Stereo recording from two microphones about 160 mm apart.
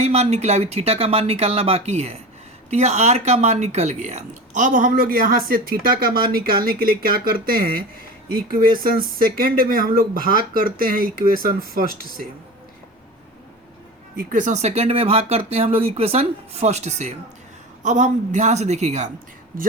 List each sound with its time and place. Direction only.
0.0 s speech: 45° right (ahead or behind); by 12.3 s 65° right (ahead or behind)
14.2 s a woman's voice: 55° right (ahead or behind)
19.5 s speech: 60° right (ahead or behind)